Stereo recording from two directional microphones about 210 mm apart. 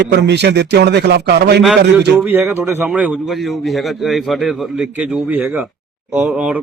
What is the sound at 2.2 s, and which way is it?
A man's voice, 10° right (ahead or behind).